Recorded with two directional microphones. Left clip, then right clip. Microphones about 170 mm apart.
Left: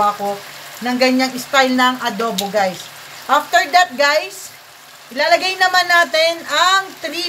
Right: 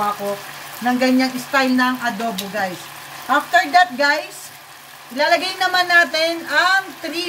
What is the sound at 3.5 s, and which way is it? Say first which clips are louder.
Speech: right 1 dB; 30° left (ahead or behind).